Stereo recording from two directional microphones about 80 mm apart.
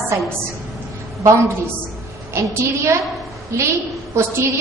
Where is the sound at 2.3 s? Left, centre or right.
Right.